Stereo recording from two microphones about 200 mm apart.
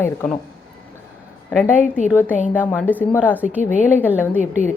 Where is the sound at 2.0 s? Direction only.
10° right (ahead or behind).